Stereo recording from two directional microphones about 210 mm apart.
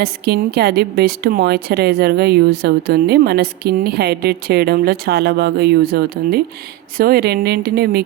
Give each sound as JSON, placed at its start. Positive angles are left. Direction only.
{"t": 0.0, "sound": "a woman's voice", "side_deg": -50}